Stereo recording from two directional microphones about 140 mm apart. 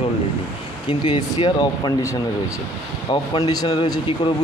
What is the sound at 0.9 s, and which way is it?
Speech, 40° left (ahead or behind).